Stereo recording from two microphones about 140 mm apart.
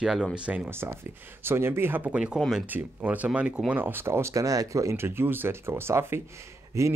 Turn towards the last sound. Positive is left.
turn(degrees=-20)  # may be behind; listen again after turning